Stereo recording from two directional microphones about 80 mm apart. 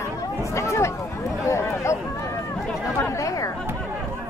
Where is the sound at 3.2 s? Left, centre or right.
Left.